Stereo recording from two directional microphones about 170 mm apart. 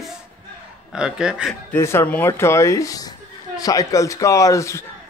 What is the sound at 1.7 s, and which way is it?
A man's voice, 15° left (ahead or behind).